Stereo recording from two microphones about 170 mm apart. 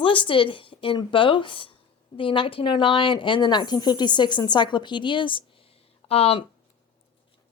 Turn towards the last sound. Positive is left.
turn(degrees=35)  # may be behind; listen again after turning